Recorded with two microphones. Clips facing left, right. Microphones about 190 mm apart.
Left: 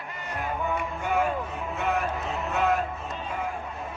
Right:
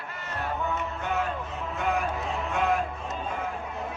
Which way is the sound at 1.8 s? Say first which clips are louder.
Even; centre (ahead or behind).